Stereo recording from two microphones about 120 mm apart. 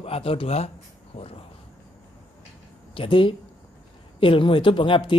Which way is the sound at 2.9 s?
45° left (ahead or behind).